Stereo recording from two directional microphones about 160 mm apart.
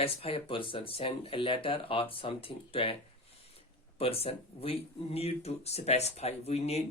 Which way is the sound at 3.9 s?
35° left (ahead or behind).